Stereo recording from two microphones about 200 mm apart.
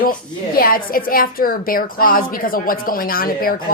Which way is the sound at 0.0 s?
45° left (ahead or behind).